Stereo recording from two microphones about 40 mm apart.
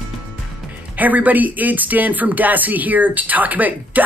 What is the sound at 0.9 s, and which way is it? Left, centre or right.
Speech, right.